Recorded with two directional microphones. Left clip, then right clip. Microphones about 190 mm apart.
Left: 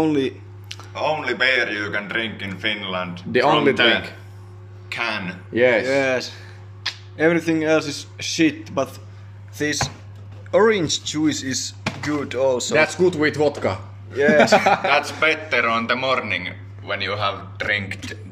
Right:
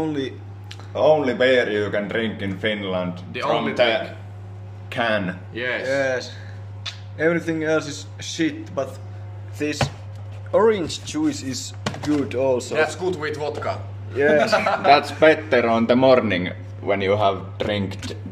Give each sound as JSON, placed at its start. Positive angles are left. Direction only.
{"t": 0.0, "sound": "a sound", "side_deg": 5}
{"t": 0.9, "sound": "a man's voice", "side_deg": -40}
{"t": 3.3, "sound": "speech", "side_deg": 40}
{"t": 3.7, "sound": "a man's voice", "side_deg": -30}
{"t": 5.5, "sound": "speech", "side_deg": 40}
{"t": 5.9, "sound": "speech", "side_deg": 5}
{"t": 6.8, "sound": "a sound", "side_deg": 45}
{"t": 7.2, "sound": "speech", "side_deg": 0}
{"t": 12.7, "sound": "speech", "side_deg": 45}
{"t": 14.1, "sound": "speech", "side_deg": -5}
{"t": 14.9, "sound": "a man's voice", "side_deg": -30}
{"t": 17.6, "sound": "speech", "side_deg": -5}